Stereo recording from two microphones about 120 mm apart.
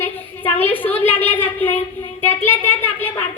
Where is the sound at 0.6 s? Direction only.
15° left (ahead or behind).